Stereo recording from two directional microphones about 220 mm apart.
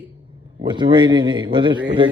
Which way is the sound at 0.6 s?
20° right (ahead or behind).